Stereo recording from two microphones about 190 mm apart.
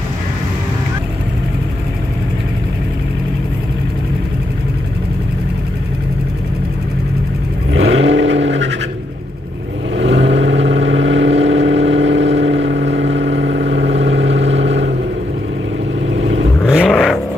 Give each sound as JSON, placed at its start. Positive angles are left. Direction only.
{"t": 7.7, "sound": "vehicle", "side_deg": -85}
{"t": 9.9, "sound": "vehicle", "side_deg": -75}
{"t": 16.6, "sound": "vehicle", "side_deg": 5}